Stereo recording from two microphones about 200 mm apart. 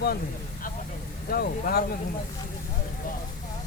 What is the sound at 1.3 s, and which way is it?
Speech, 50° left (ahead or behind).